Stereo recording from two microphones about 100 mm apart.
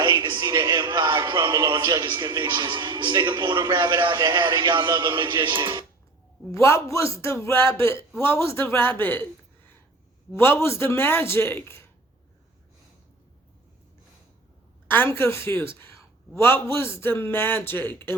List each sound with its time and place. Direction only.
0.0 s music: 50° right (ahead or behind)
2.5 s a man's voice: 45° right (ahead or behind)
6.5 s a man's voice: 30° left (ahead or behind)
10.3 s a man's voice: 25° left (ahead or behind)
14.8 s a man's voice: 20° left (ahead or behind)